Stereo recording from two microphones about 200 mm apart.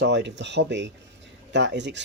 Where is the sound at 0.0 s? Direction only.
60° right (ahead or behind).